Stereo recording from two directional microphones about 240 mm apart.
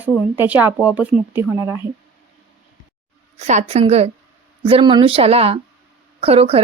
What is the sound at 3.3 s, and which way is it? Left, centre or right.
A woman's voice, right.